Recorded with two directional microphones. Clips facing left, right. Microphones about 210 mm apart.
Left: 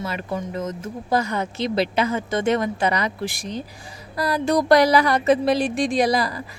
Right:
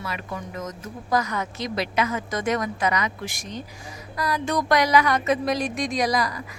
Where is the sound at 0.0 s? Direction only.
30° left (ahead or behind).